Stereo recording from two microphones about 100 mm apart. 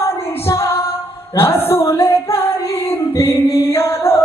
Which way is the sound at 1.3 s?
25° left (ahead or behind).